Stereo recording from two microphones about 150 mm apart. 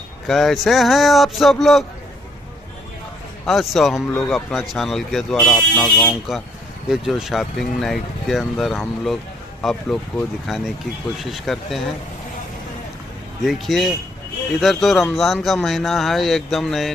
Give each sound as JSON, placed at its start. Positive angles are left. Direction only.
{"t": 0.3, "sound": "speech", "side_deg": 0}
{"t": 3.4, "sound": "speech", "side_deg": 0}
{"t": 13.4, "sound": "speech", "side_deg": 0}